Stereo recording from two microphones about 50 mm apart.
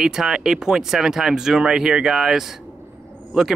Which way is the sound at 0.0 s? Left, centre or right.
Centre.